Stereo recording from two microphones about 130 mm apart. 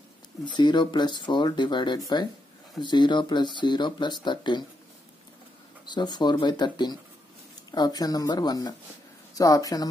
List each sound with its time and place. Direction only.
0.6 s speech: 35° left (ahead or behind)
5.9 s speech: 35° left (ahead or behind)